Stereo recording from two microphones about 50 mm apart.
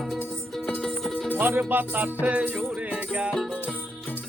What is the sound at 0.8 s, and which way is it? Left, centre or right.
Music, centre.